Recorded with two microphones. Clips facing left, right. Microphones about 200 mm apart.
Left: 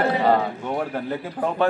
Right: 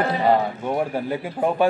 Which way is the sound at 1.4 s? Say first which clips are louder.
Right 3 dB; 25° right (ahead or behind).